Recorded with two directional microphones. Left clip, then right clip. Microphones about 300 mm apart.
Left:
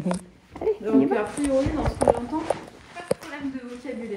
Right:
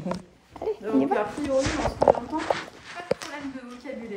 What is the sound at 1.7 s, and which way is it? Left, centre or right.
Speech, left.